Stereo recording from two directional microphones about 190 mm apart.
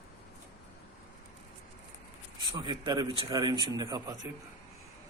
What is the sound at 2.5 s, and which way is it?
Speech, 20° right (ahead or behind).